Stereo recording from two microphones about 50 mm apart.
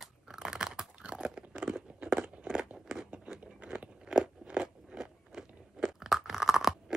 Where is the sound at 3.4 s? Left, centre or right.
Right; by 6.9 s centre.